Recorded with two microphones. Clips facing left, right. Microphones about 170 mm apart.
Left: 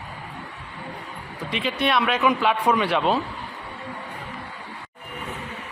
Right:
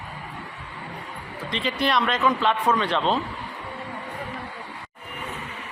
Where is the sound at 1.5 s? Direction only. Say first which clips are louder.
Left 1 dB; 5° left (ahead or behind).